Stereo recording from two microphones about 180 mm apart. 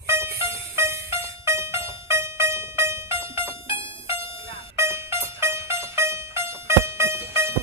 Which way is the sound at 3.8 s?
30° left (ahead or behind).